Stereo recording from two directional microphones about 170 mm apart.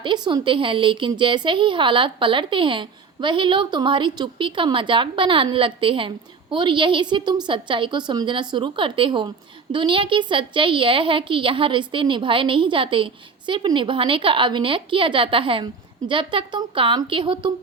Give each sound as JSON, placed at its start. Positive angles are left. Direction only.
{"t": 0.0, "sound": "a woman's voice", "side_deg": -25}